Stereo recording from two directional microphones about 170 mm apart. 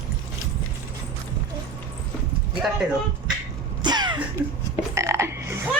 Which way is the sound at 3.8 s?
25° right (ahead or behind).